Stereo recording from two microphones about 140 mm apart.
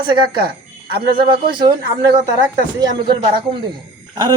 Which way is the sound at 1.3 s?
35° right (ahead or behind).